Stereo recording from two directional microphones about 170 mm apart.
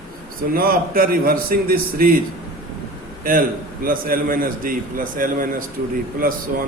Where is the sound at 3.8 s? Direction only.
55° right (ahead or behind).